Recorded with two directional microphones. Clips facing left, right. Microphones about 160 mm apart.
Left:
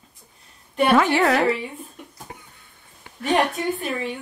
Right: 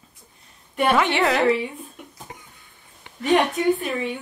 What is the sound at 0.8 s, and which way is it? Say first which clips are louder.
Speech: left 2 dB; centre (ahead or behind).